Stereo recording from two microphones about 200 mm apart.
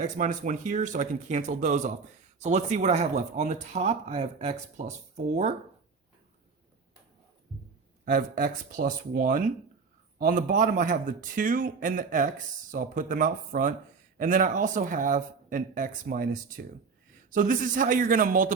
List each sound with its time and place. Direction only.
0.2 s speech: 40° right (ahead or behind)
8.0 s speech: 45° right (ahead or behind)